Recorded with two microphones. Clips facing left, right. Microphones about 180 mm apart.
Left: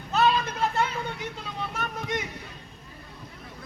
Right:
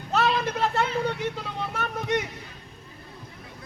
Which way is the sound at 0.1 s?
70° right (ahead or behind).